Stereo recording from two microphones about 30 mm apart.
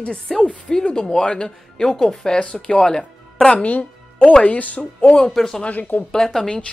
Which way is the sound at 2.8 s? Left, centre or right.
Centre.